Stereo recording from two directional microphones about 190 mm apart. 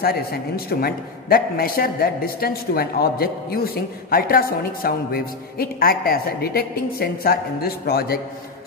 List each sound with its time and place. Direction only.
0.0 s a man's voice: 55° left (ahead or behind)